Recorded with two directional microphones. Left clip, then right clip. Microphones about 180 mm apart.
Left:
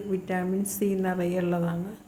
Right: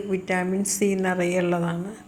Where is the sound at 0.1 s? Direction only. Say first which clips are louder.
Right 4 dB; 10° right (ahead or behind).